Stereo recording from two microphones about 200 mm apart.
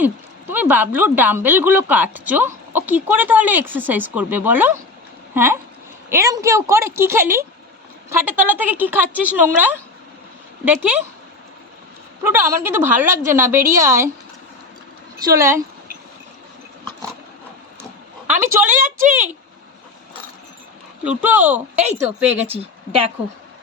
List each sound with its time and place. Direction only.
0.0 s speech: 10° right (ahead or behind)
12.2 s speech: 10° right (ahead or behind)
15.2 s speech: 15° right (ahead or behind)
18.3 s speech: 10° right (ahead or behind)
18.7 s a woman's voice: 40° right (ahead or behind)
21.0 s speech: 5° right (ahead or behind)